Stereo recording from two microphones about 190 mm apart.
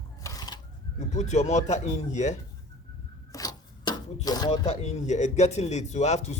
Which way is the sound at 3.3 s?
20° left (ahead or behind).